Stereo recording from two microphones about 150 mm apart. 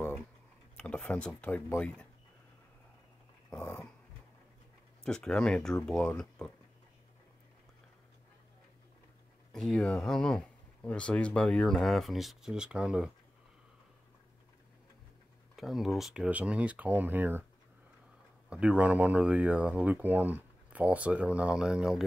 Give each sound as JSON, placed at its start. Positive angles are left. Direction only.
{"t": 0.7, "sound": "speech", "side_deg": 5}
{"t": 3.5, "sound": "speech", "side_deg": 15}
{"t": 5.0, "sound": "speech", "side_deg": 5}
{"t": 9.5, "sound": "speech", "side_deg": 5}
{"t": 15.5, "sound": "speech", "side_deg": 0}
{"t": 18.5, "sound": "speech", "side_deg": -5}